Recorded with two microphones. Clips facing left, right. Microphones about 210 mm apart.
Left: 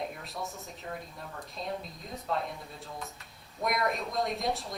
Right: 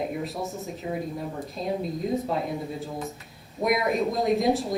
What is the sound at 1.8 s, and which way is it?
Speech, 50° right (ahead or behind).